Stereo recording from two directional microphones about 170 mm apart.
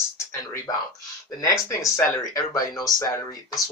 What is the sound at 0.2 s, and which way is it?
Speech, 15° left (ahead or behind).